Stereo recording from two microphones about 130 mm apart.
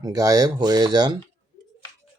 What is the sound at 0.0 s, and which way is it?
Speech, 25° right (ahead or behind).